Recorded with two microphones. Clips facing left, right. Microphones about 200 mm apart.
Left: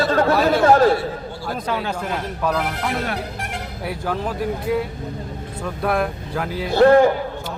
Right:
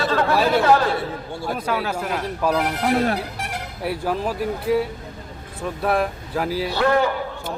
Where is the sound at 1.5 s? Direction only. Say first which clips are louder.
Even; 5° right (ahead or behind).